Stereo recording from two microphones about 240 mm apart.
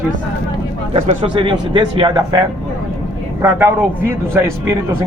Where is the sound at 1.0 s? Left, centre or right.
Right.